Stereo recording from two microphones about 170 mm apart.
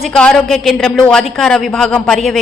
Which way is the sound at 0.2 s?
5° left (ahead or behind).